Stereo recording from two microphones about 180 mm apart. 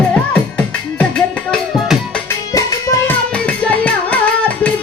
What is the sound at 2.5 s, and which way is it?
Music, 20° left (ahead or behind).